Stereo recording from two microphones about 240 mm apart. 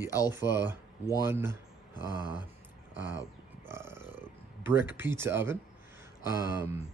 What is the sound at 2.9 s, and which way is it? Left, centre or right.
Speech, right.